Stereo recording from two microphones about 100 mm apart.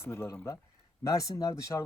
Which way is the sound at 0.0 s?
25° left (ahead or behind).